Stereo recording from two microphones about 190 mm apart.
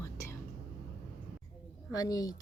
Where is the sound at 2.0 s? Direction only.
20° left (ahead or behind).